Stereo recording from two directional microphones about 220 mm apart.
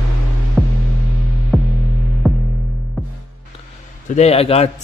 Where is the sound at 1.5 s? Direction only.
Centre (ahead or behind).